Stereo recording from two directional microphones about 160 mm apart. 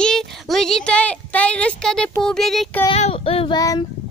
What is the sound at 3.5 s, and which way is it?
Child singing, 25° left (ahead or behind).